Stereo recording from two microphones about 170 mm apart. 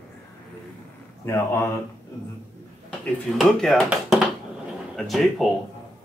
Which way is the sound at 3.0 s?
Centre (ahead or behind).